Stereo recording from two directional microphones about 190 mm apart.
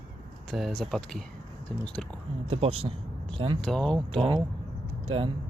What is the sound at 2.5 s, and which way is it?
Speech, 30° right (ahead or behind).